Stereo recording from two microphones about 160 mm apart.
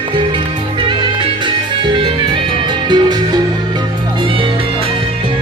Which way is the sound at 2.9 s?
25° right (ahead or behind).